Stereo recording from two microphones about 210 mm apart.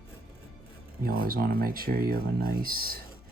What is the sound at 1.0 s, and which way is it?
Speech, 45° right (ahead or behind).